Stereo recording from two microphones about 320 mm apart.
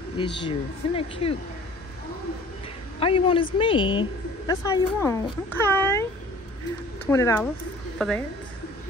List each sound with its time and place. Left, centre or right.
0.4 s a woman's voice: centre
3.0 s a woman's voice: centre
7.1 s a woman's voice: centre